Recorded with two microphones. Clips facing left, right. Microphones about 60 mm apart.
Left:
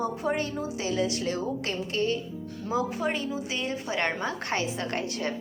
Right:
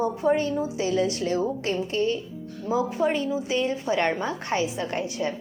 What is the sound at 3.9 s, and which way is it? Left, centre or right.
Speech, left.